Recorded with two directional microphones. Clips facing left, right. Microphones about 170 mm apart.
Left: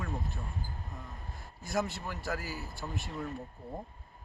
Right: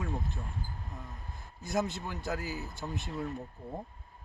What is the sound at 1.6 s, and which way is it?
Speech, 20° right (ahead or behind).